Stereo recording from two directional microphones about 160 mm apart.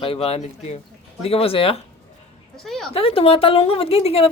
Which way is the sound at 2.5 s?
Centre (ahead or behind).